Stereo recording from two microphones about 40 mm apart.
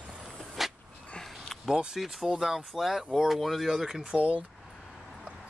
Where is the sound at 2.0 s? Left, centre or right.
Centre.